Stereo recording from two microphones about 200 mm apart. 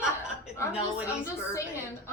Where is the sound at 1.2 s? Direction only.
15° left (ahead or behind).